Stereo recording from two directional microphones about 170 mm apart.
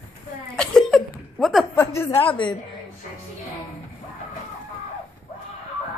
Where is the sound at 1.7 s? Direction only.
15° left (ahead or behind).